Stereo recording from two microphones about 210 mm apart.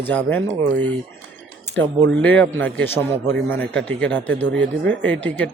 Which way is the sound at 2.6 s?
10° left (ahead or behind).